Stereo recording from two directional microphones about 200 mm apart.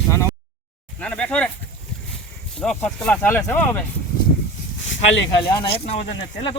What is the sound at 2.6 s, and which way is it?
Speech, 5° left (ahead or behind).